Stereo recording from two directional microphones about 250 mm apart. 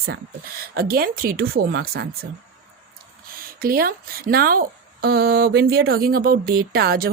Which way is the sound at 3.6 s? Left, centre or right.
Right.